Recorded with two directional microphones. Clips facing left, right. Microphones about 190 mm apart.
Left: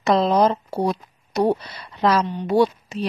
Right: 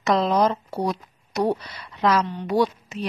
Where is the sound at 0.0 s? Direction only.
30° left (ahead or behind).